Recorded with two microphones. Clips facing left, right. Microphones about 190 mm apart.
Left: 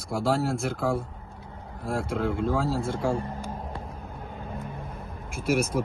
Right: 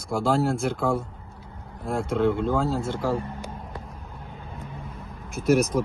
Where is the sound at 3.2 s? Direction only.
30° left (ahead or behind).